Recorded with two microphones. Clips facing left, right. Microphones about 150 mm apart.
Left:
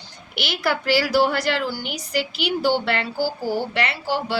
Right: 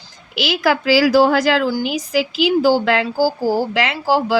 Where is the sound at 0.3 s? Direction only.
90° right.